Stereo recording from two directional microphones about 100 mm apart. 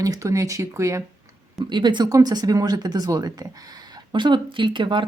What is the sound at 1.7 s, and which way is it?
Speech, 50° right (ahead or behind).